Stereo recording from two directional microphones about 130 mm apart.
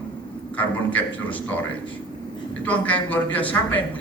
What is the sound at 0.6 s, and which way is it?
Speech, 10° left (ahead or behind).